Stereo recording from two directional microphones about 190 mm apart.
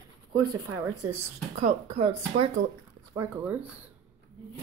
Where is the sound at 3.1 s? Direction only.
15° right (ahead or behind).